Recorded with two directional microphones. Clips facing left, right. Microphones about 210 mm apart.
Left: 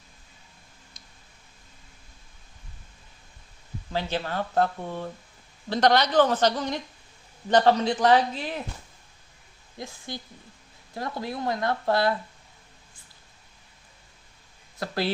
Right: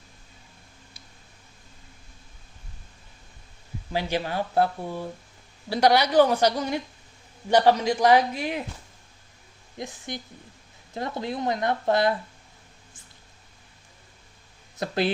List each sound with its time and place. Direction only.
3.9 s a woman's voice: 10° right (ahead or behind)
9.7 s speech: 20° right (ahead or behind)
14.8 s speech: 20° right (ahead or behind)